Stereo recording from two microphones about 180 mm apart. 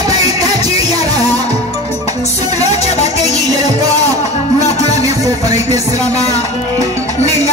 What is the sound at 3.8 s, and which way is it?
Music, 20° right (ahead or behind).